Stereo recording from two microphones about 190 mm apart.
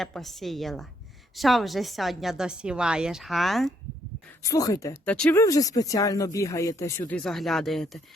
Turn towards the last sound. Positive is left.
turn(degrees=0)  # may be behind; listen again after turning